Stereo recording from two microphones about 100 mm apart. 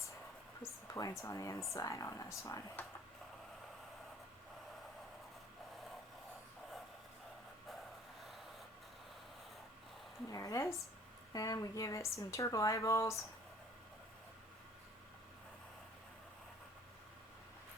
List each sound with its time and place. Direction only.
0.6 s a sound: 35° left (ahead or behind)
1.2 s speech: 30° left (ahead or behind)
10.2 s speech: 35° left (ahead or behind)